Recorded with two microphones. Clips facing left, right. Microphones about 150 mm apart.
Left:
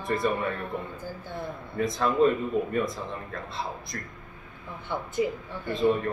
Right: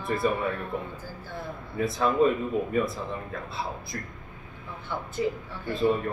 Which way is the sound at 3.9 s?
Centre (ahead or behind).